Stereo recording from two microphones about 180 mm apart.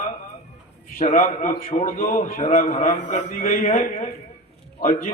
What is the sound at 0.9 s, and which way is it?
A man's voice, 45° left (ahead or behind).